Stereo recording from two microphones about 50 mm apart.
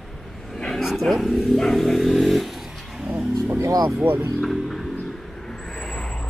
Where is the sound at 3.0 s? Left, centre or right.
Right.